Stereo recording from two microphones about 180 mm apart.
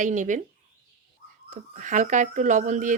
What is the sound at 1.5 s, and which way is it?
Speech, 45° right (ahead or behind).